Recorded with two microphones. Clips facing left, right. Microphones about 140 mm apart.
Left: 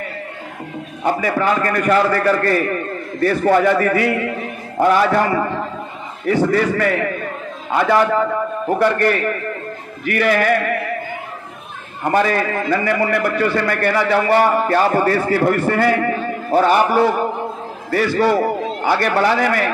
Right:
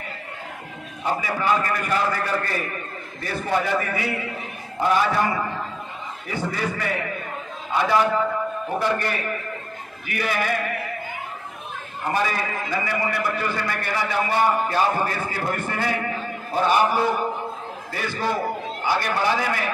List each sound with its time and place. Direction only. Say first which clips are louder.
1.0 s a man's voice: left 6 dB; 55° left (ahead or behind)
12.1 s a man's voice: left 8 dB; 55° left (ahead or behind)